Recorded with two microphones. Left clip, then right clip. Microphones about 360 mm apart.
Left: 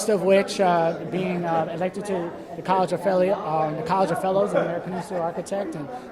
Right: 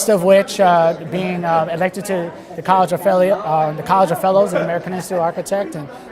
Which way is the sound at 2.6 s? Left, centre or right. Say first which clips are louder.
Right 8 dB; right.